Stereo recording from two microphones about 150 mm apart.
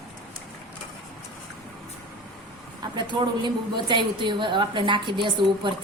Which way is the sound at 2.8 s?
30° right (ahead or behind).